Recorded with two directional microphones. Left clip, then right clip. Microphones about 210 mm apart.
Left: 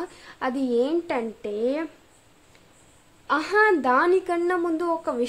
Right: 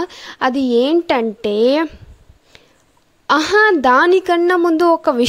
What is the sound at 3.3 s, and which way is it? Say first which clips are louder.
A woman's voice: right 8 dB; 45° right (ahead or behind).